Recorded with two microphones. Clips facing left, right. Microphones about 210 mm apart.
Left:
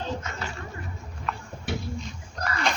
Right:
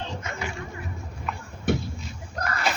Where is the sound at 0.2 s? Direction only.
15° right (ahead or behind).